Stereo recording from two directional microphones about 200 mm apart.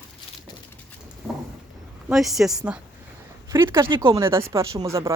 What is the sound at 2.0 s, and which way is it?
Speech, centre (ahead or behind).